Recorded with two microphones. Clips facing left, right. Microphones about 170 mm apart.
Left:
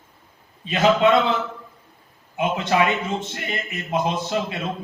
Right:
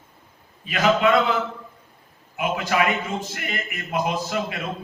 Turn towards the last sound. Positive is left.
turn(degrees=25)  # may be behind; listen again after turning